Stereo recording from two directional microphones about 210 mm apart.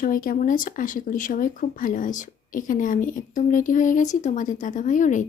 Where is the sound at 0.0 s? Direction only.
40° left (ahead or behind).